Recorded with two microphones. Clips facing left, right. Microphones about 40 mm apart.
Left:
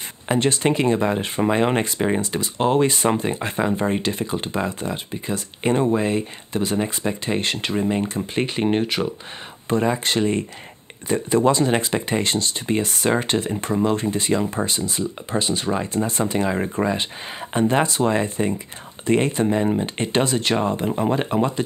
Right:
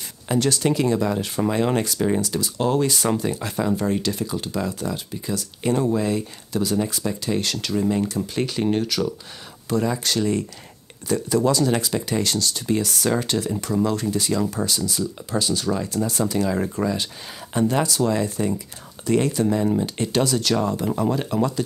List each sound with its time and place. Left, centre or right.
0.3 s speech: left